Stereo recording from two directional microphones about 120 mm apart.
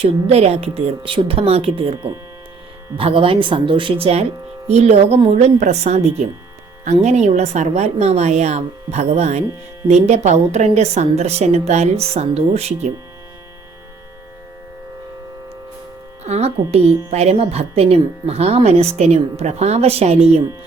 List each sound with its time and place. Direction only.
0.0 s speech: 60° right (ahead or behind)
3.0 s speech: 50° right (ahead or behind)
16.2 s speech: 60° right (ahead or behind)